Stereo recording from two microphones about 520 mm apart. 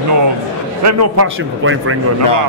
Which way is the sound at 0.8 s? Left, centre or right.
Right.